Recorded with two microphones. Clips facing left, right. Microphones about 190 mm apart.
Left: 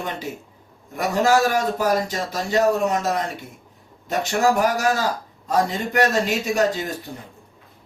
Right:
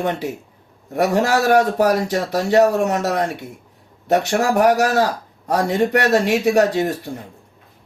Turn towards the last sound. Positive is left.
turn(degrees=-80)